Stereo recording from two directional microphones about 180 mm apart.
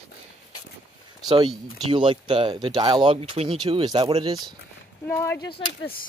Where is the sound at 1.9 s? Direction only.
30° right (ahead or behind).